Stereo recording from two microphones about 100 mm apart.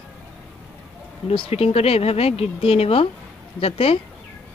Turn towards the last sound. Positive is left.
turn(degrees=75)  # may be behind; listen again after turning